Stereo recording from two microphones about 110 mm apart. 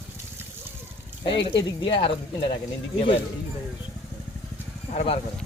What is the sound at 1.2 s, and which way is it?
Speech, 45° left (ahead or behind).